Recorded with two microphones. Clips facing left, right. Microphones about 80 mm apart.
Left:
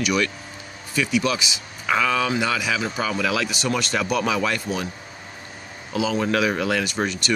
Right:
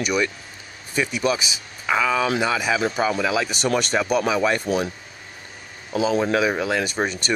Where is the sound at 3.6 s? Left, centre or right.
Right.